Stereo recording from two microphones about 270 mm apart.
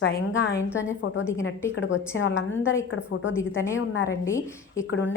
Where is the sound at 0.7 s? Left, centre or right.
Centre.